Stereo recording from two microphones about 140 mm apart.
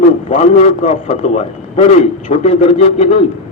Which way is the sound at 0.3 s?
60° left (ahead or behind).